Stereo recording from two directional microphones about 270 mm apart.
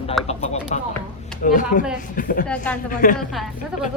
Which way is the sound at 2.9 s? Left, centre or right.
Left.